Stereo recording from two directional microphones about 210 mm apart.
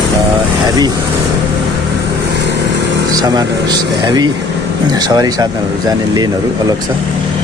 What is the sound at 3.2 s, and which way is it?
Speech, 20° right (ahead or behind).